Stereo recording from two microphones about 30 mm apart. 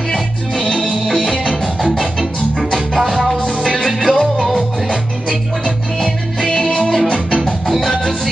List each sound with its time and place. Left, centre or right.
3.0 s music: centre
3.3 s music: centre
4.4 s music: centre
6.4 s music: centre